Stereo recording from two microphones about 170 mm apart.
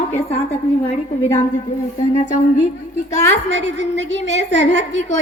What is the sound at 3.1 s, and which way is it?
A woman's voice, 40° left (ahead or behind).